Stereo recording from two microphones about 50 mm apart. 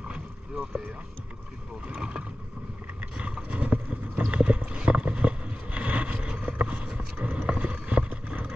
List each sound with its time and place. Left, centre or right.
2.0 s speech: centre
3.2 s vehicle: right
4.3 s boat: right